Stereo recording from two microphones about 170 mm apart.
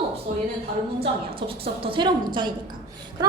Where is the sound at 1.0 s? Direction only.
30° right (ahead or behind).